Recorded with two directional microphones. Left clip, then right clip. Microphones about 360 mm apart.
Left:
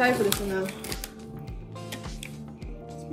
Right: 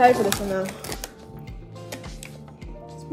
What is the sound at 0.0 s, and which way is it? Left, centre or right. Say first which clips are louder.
Speech: right 6 dB; centre.